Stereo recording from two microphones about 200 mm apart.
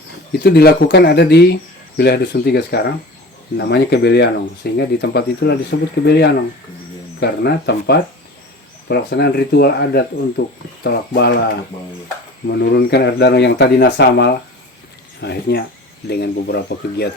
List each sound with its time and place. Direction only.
0.4 s speech: 55° left (ahead or behind)
12.5 s speech: 55° left (ahead or behind)